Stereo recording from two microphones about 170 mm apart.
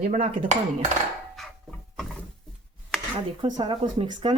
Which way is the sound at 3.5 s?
30° right (ahead or behind).